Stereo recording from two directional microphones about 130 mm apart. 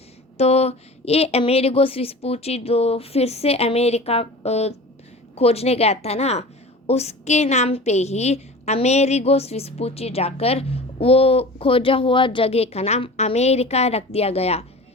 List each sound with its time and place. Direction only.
0.3 s a woman's voice: 55° left (ahead or behind)